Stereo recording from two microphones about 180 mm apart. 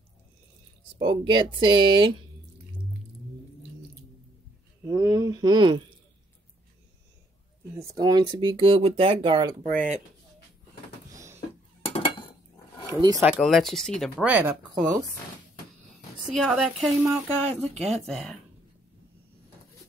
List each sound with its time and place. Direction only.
0.9 s speech: 25° right (ahead or behind)
4.8 s speech: 20° right (ahead or behind)
7.9 s speech: 20° right (ahead or behind)
11.1 s a sound: 15° right (ahead or behind)
11.8 s dishes: 30° left (ahead or behind)
13.2 s speech: 5° right (ahead or behind)
14.2 s speech: 10° right (ahead or behind)
16.3 s speech: centre (ahead or behind)